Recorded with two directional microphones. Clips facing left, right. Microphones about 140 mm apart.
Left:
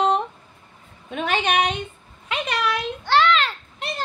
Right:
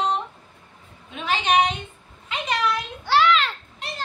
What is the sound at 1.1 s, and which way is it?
Speech, 55° left (ahead or behind).